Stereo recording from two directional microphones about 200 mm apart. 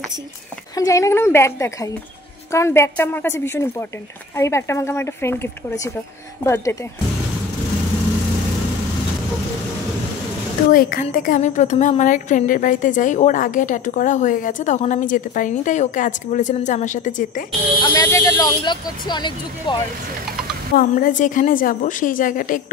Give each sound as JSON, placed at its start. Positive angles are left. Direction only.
{"t": 0.7, "sound": "speech", "side_deg": 15}
{"t": 10.7, "sound": "a woman's voice", "side_deg": 45}
{"t": 17.8, "sound": "speech", "side_deg": 15}
{"t": 20.7, "sound": "a woman's voice", "side_deg": 40}